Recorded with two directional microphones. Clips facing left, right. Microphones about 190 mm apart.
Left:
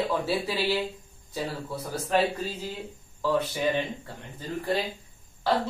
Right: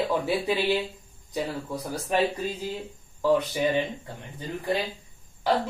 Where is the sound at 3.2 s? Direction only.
15° right (ahead or behind).